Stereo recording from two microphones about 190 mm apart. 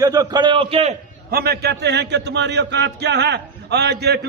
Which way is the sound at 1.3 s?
55° right (ahead or behind).